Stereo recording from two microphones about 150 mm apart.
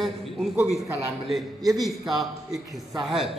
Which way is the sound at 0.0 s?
Centre (ahead or behind).